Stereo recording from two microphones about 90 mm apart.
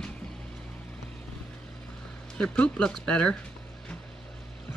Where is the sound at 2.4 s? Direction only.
10° left (ahead or behind).